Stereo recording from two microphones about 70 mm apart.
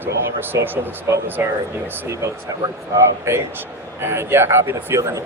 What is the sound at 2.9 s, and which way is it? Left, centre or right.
A man's voice, right.